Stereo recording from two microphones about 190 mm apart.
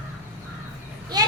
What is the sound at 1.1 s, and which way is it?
Vehicle, 20° right (ahead or behind).